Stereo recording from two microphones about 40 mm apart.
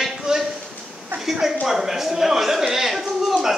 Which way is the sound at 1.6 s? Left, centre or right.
Centre.